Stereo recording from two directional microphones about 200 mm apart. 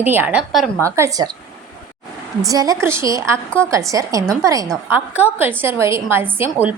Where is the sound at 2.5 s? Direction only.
15° right (ahead or behind).